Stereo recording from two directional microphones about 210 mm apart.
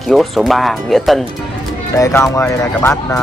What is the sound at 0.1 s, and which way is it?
Speech, centre (ahead or behind).